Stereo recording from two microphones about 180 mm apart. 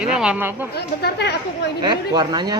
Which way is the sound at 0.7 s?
65° left (ahead or behind).